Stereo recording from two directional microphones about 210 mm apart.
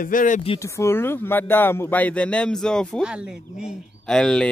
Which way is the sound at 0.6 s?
15° left (ahead or behind).